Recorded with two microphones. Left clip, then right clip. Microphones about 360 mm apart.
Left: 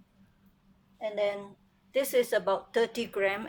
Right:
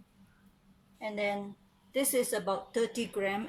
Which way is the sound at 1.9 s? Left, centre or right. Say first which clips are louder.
Left 4 dB; left.